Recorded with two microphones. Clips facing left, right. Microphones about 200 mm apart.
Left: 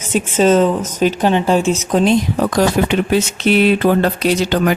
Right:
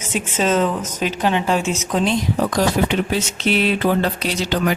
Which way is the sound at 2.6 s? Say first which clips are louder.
Left 5 dB; 60° left (ahead or behind).